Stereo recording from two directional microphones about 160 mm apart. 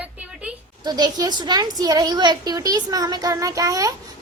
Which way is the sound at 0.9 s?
25° right (ahead or behind).